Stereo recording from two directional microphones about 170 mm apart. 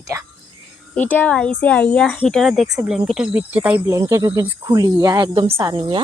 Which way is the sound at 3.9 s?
20° right (ahead or behind).